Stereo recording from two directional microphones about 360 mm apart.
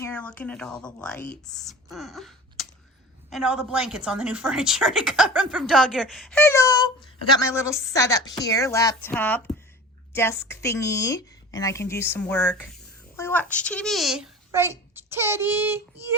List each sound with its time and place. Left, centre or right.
0.0 s a woman's voice: centre